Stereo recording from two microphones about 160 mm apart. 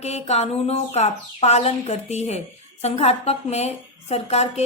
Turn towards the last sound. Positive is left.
turn(degrees=40)  # may be behind; listen again after turning